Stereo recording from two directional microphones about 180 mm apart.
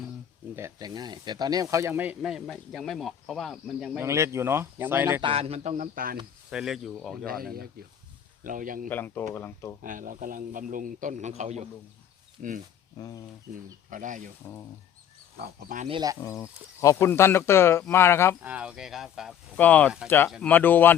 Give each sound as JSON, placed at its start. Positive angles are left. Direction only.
{"t": 0.5, "sound": "speech", "side_deg": -20}
{"t": 4.0, "sound": "speech", "side_deg": -15}
{"t": 5.2, "sound": "speech", "side_deg": -35}
{"t": 6.5, "sound": "speech", "side_deg": -5}
{"t": 8.4, "sound": "a man's voice", "side_deg": -50}
{"t": 8.9, "sound": "speech", "side_deg": 10}
{"t": 9.8, "sound": "a man's voice", "side_deg": -45}
{"t": 13.0, "sound": "speech", "side_deg": 20}
{"t": 13.9, "sound": "a man's voice", "side_deg": -45}
{"t": 15.4, "sound": "a man's voice", "side_deg": -45}
{"t": 15.9, "sound": "speech", "side_deg": -25}
{"t": 16.2, "sound": "speech", "side_deg": 15}
{"t": 18.4, "sound": "speech", "side_deg": -5}
{"t": 19.5, "sound": "speech", "side_deg": 10}